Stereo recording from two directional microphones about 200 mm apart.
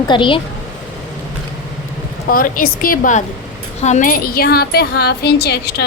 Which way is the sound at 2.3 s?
45° left (ahead or behind).